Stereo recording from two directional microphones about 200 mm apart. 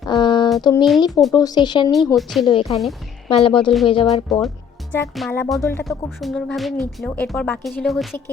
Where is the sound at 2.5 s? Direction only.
25° left (ahead or behind).